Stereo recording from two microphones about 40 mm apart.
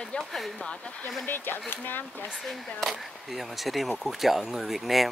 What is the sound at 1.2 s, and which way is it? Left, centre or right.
Speech, left.